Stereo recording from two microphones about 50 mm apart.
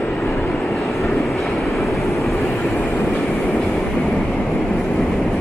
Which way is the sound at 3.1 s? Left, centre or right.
Left.